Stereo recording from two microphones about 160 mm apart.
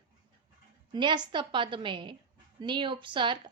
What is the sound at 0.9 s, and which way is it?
A woman's voice, 30° right (ahead or behind).